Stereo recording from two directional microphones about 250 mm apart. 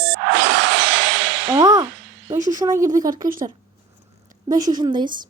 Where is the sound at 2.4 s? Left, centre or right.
Right.